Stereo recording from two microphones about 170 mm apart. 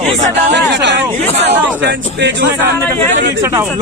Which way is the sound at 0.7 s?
90° right.